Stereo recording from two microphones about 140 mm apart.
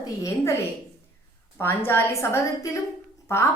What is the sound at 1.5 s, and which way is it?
A woman's voice, 15° left (ahead or behind).